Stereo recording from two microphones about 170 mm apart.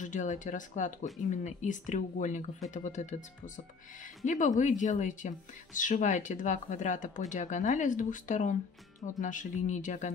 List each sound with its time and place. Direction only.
0.0 s speech: 45° left (ahead or behind)